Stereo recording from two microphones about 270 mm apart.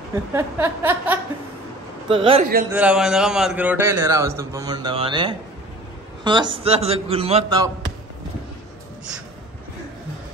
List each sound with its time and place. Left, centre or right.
0.3 s a man's voice: centre
2.0 s a man's voice: centre
2.7 s a man's voice: centre